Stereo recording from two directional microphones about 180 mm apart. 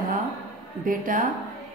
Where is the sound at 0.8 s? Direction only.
50° right (ahead or behind).